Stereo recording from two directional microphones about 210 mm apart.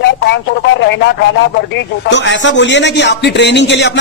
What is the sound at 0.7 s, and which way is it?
Speech, 60° left (ahead or behind).